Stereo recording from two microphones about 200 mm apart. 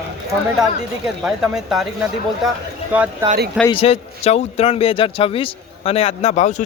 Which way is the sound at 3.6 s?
30° left (ahead or behind).